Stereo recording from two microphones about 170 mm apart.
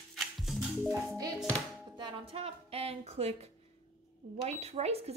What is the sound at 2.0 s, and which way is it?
Speech, 35° right (ahead or behind).